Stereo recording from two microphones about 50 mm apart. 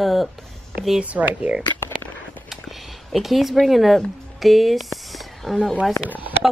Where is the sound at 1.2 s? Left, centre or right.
Centre.